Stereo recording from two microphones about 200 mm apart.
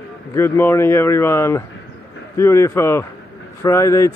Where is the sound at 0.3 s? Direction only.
15° left (ahead or behind).